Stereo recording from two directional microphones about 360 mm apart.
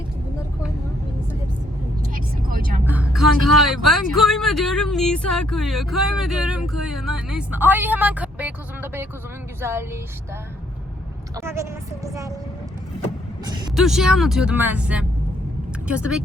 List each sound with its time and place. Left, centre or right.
2.1 s vehicle: right
2.8 s speech: centre
11.3 s speech: centre
13.4 s speech: centre